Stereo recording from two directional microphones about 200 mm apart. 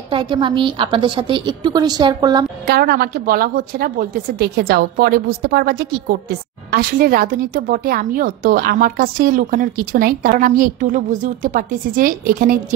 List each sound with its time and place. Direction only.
0.1 s a woman's voice: 25° right (ahead or behind)
2.6 s a woman's voice: 50° right (ahead or behind)